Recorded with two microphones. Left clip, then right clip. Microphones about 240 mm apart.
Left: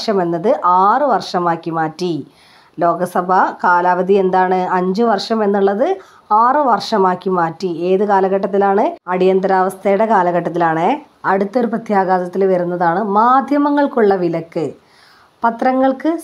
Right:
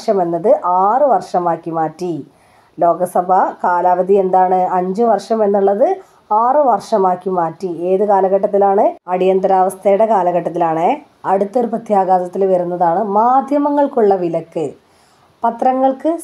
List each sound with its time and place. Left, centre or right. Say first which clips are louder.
0.0 s a woman's voice: right 1 dB; left
5.1 s speech: right 2 dB; left
5.4 s a woman's voice: right 3 dB; left
9.1 s speech: left 1 dB; left
12.7 s a woman's voice: right 1 dB; left
13.3 s speech: even; left